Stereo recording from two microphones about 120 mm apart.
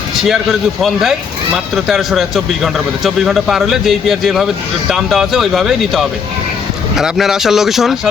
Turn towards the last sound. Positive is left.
turn(degrees=0)  # may be behind; listen again after turning